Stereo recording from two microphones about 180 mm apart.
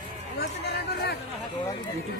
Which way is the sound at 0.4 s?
65° left (ahead or behind).